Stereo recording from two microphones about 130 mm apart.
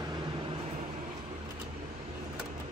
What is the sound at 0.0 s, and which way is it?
Vehicle, 35° right (ahead or behind).